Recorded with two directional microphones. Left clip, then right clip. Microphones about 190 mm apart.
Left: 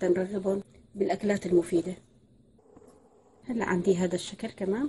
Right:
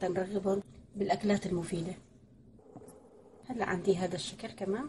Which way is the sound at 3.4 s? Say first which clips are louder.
Left 4 dB; 45° left (ahead or behind).